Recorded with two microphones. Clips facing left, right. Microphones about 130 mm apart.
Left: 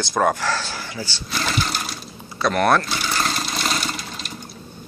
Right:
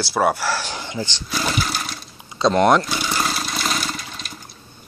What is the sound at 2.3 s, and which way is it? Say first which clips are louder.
Speech: right 3 dB; 20° right (ahead or behind).